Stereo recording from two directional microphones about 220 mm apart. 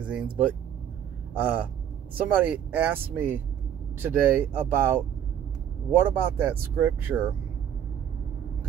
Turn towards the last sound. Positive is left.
turn(degrees=-10)  # may be behind; listen again after turning